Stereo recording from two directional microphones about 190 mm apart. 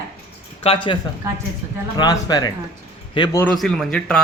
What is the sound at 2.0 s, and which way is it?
A man's voice, 20° left (ahead or behind).